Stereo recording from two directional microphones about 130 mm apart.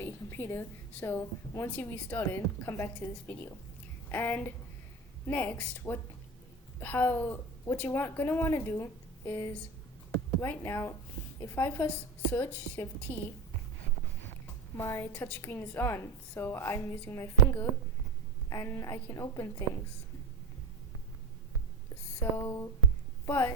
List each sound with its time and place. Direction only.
0.0 s a woman's voice: 15° left (ahead or behind)
14.8 s a woman's voice: 20° left (ahead or behind)
22.2 s a woman's voice: 25° left (ahead or behind)